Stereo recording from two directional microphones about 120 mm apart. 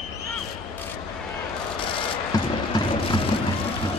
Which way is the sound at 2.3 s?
30° left (ahead or behind).